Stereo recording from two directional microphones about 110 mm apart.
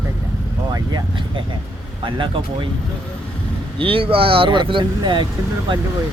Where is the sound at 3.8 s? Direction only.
55° right (ahead or behind).